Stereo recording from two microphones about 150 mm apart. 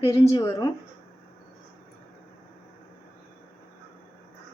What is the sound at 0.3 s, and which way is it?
Speech, 25° left (ahead or behind).